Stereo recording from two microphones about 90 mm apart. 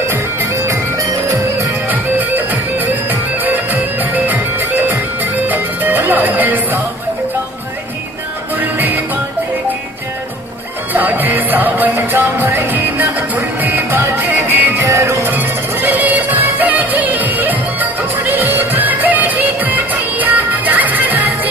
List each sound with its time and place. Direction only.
0.1 s music: 35° right (ahead or behind)
1.9 s music: 20° right (ahead or behind)
8.5 s music: 20° right (ahead or behind)
10.9 s music: 20° right (ahead or behind)
14.9 s music: 35° right (ahead or behind)
15.2 s music: 20° right (ahead or behind)